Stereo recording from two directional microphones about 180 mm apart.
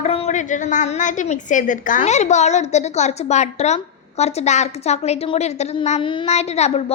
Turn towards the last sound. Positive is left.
turn(degrees=35)  # may be behind; listen again after turning